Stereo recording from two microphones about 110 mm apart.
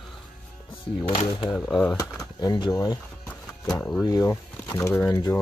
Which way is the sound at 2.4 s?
40° left (ahead or behind).